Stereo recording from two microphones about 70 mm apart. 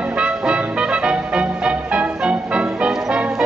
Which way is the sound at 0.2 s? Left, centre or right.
Centre.